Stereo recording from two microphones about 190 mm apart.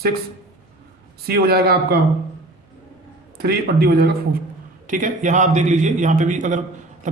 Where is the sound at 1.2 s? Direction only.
55° right (ahead or behind).